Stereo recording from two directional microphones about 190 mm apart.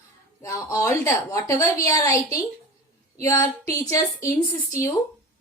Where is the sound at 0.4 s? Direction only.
15° left (ahead or behind).